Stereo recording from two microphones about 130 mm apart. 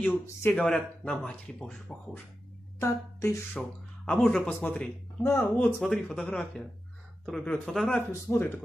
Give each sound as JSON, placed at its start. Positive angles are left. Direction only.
{"t": 0.6, "sound": "speech", "side_deg": 5}
{"t": 2.8, "sound": "a woman's voice", "side_deg": 20}
{"t": 3.5, "sound": "speech", "side_deg": 5}
{"t": 5.2, "sound": "a woman's voice", "side_deg": 20}
{"t": 5.8, "sound": "speech", "side_deg": 5}
{"t": 8.1, "sound": "speech", "side_deg": 15}